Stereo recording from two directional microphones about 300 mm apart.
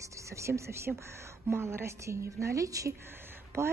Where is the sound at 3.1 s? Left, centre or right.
Centre.